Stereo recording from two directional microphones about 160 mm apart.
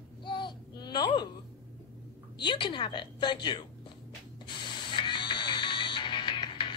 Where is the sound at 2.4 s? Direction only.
30° left (ahead or behind).